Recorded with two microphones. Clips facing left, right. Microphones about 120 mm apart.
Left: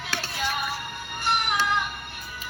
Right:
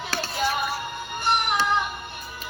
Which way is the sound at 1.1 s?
20° right (ahead or behind).